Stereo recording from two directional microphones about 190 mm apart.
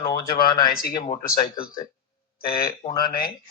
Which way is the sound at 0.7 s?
50° left (ahead or behind).